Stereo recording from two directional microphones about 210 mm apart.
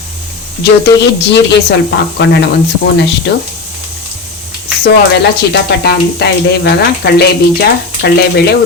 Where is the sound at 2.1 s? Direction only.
55° left (ahead or behind).